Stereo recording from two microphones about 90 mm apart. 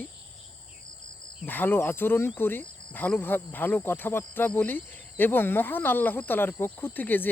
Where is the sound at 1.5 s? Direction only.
20° left (ahead or behind).